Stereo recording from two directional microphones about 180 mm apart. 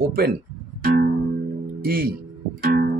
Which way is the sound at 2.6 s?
60° right (ahead or behind).